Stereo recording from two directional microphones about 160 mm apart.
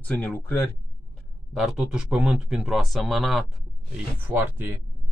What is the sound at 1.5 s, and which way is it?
Speech, 5° right (ahead or behind).